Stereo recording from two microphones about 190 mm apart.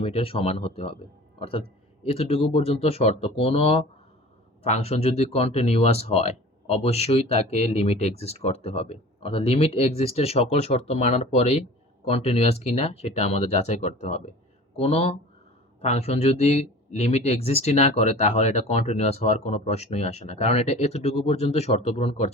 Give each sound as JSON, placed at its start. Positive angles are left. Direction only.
{"t": 0.0, "sound": "speech", "side_deg": 30}